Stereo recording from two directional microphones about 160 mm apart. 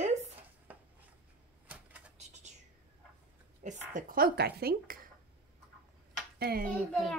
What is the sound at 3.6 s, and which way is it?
Speech, 60° right (ahead or behind).